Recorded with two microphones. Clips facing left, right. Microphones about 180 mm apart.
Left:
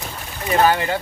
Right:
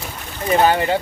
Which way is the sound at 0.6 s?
25° right (ahead or behind).